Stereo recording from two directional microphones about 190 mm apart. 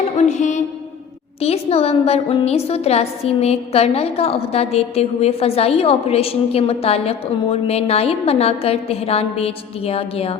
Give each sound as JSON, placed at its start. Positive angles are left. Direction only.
{"t": 0.2, "sound": "a woman's voice", "side_deg": 40}